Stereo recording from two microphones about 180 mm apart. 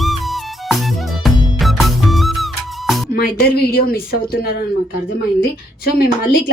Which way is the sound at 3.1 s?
60° left (ahead or behind).